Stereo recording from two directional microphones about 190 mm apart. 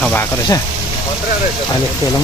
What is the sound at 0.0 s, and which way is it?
Speech, 10° left (ahead or behind).